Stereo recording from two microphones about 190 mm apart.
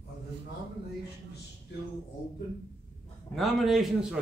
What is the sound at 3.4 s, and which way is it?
Speech, centre (ahead or behind).